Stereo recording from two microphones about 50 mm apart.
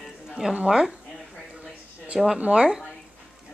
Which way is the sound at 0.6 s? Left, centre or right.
Centre.